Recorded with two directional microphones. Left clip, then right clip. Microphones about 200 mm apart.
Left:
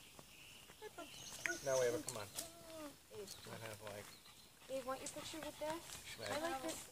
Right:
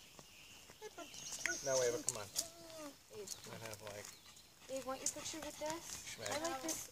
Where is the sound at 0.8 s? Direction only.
40° right (ahead or behind).